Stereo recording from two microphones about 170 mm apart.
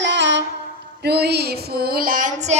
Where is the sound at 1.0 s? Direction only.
70° right (ahead or behind); by 2.5 s 50° right (ahead or behind).